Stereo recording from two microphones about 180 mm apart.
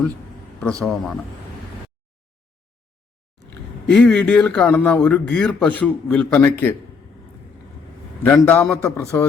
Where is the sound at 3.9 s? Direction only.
5° left (ahead or behind).